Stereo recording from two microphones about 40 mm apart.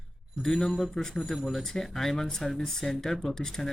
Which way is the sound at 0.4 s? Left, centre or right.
Centre.